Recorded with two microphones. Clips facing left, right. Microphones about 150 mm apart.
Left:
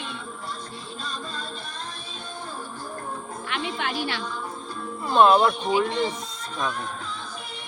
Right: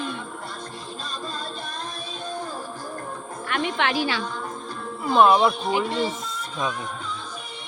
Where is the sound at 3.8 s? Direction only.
90° right.